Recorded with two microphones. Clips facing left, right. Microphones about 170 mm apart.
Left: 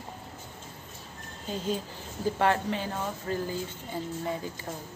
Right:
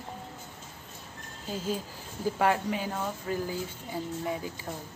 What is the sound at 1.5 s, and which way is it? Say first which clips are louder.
A woman's voice: left 1 dB; 5° right (ahead or behind).